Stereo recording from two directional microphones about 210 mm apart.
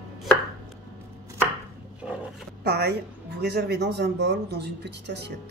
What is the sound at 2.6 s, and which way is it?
A woman's voice, 50° right (ahead or behind).